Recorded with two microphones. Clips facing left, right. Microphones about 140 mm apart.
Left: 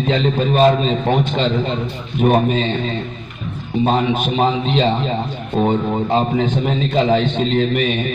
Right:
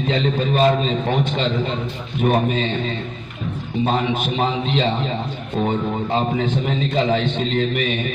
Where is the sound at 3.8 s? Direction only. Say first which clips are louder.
Left 4 dB; 40° left (ahead or behind).